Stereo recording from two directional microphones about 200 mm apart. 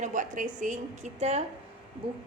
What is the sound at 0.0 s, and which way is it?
A woman's voice, 40° right (ahead or behind).